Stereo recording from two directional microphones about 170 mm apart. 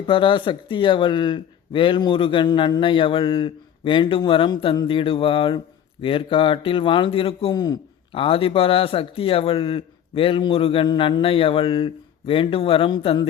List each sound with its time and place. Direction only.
0.1 s speech: 30° left (ahead or behind)